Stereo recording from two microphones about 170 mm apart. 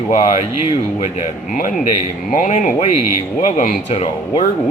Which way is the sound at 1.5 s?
50° left (ahead or behind).